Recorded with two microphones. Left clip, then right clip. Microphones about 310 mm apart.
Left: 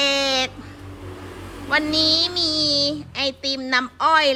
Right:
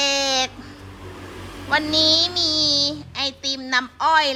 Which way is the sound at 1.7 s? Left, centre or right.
Centre.